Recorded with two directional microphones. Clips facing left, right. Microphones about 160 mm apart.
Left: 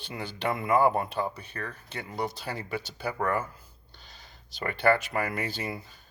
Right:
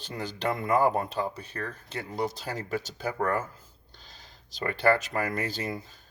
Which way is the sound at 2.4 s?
45° right (ahead or behind).